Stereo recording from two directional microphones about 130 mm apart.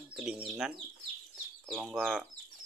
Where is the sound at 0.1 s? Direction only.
5° right (ahead or behind).